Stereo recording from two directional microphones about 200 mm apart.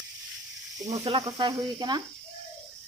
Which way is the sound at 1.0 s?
25° right (ahead or behind).